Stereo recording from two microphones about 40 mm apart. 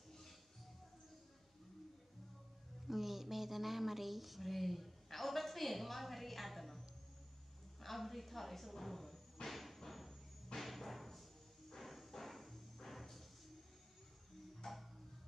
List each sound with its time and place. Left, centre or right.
2.9 s speech: centre
7.8 s music: centre
14.6 s music: centre